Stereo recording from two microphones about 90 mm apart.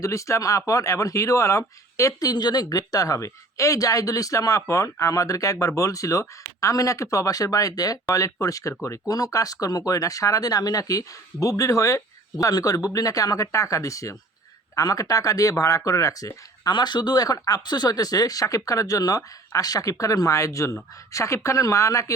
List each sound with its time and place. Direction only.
0.0 s speech: 35° left (ahead or behind)
16.7 s speech: 55° left (ahead or behind); by 22.1 s 35° left (ahead or behind)